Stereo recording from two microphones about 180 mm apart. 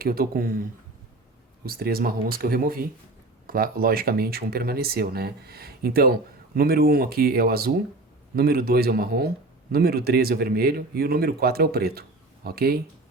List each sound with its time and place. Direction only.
0.0 s speech: 55° right (ahead or behind)
1.6 s speech: 55° right (ahead or behind)